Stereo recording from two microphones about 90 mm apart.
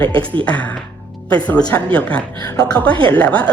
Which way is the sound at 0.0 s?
70° right (ahead or behind).